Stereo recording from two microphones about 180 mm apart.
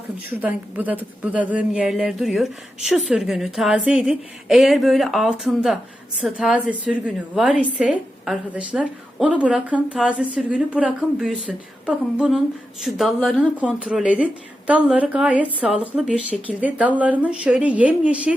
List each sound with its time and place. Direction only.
0.3 s a woman's voice: 10° right (ahead or behind)